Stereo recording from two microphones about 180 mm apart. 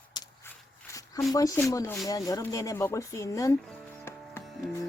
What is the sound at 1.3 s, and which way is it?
Speech, 15° left (ahead or behind).